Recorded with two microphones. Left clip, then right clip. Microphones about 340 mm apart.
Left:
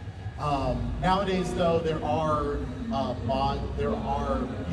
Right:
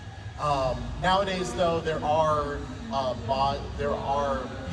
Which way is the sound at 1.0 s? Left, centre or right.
Right.